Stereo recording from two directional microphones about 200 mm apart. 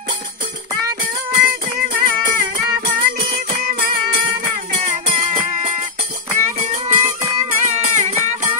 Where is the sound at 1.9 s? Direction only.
40° right (ahead or behind).